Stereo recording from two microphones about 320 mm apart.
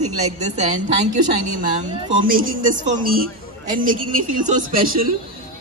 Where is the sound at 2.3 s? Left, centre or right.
Right.